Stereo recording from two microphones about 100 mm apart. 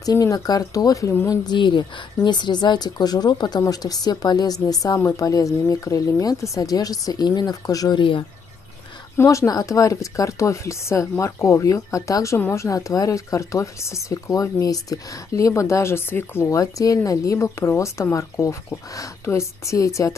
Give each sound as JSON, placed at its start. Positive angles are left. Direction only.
{"t": 0.0, "sound": "speech", "side_deg": 35}
{"t": 8.0, "sound": "speech", "side_deg": 55}
{"t": 9.1, "sound": "speech", "side_deg": 30}
{"t": 12.6, "sound": "speech", "side_deg": 35}